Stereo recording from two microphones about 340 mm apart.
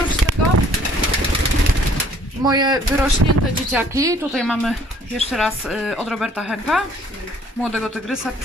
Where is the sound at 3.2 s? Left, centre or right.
Right.